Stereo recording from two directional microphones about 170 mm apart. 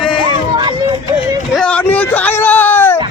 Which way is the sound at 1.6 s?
5° left (ahead or behind).